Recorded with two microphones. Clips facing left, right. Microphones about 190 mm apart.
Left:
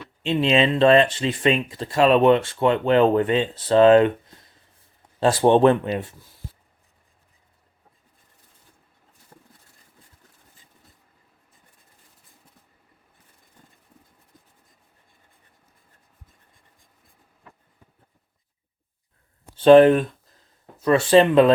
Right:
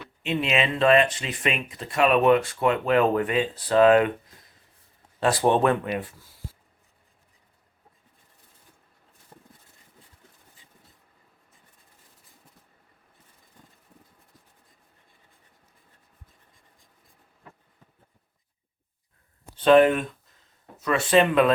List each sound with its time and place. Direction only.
0.2 s speech: 30° left (ahead or behind)
9.3 s horse: 20° right (ahead or behind)
19.5 s speech: 30° left (ahead or behind)